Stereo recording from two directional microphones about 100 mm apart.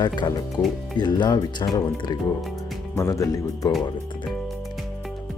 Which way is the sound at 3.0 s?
35° left (ahead or behind).